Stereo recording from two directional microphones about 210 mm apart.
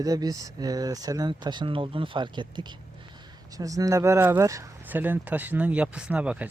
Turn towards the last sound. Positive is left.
turn(degrees=-5)  # may be behind; listen again after turning